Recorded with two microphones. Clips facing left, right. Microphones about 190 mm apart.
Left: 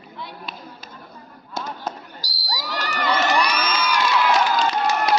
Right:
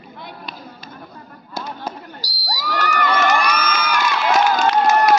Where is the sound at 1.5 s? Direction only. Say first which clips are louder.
Right 1 dB; centre (ahead or behind).